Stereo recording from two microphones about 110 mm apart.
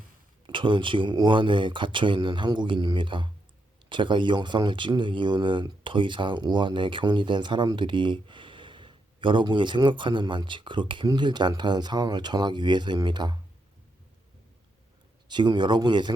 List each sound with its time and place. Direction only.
0.4 s speech: 45° right (ahead or behind)
15.3 s speech: 45° right (ahead or behind)